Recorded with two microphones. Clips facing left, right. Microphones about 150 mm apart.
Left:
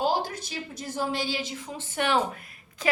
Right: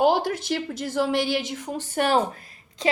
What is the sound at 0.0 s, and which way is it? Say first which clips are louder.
A woman's voice: right 6 dB; 65° right (ahead or behind).